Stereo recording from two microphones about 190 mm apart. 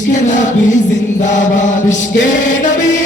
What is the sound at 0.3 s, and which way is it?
Chant, 40° left (ahead or behind).